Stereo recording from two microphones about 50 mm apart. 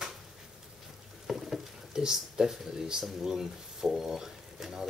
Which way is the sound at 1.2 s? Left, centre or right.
Centre.